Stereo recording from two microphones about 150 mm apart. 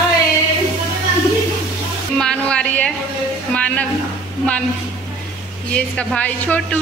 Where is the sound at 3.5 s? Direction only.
10° left (ahead or behind).